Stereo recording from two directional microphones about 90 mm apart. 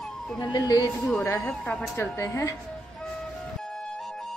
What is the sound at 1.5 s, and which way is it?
Speech, 10° left (ahead or behind).